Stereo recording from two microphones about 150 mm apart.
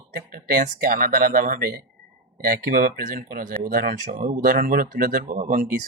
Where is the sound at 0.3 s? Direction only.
70° right (ahead or behind).